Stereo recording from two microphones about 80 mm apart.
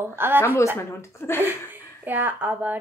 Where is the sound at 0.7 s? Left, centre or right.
Left.